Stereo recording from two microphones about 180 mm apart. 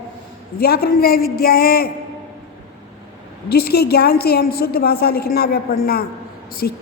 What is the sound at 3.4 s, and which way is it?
A woman's voice, 60° left (ahead or behind).